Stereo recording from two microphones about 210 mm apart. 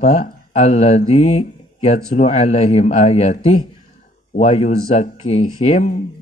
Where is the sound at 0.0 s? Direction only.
35° left (ahead or behind).